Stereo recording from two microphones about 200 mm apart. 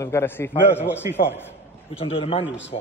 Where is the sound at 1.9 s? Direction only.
30° left (ahead or behind).